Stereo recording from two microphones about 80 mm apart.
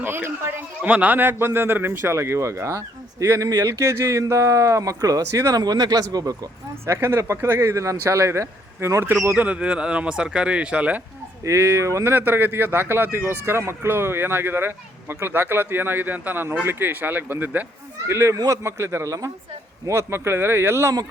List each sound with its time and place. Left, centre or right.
0.0 s a man's voice: right
6.8 s a man's voice: right
9.4 s speech: centre
11.4 s a man's voice: right
18.1 s a man's voice: right
19.9 s a man's voice: right